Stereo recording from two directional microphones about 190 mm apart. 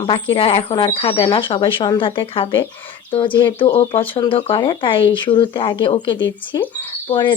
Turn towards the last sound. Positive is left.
turn(degrees=25)  # may be behind; listen again after turning